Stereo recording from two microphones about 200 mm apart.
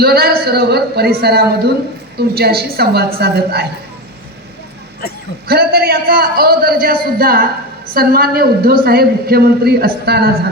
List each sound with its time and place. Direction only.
0.0 s a man's voice: 50° right (ahead or behind)
5.5 s a woman's voice: 50° right (ahead or behind)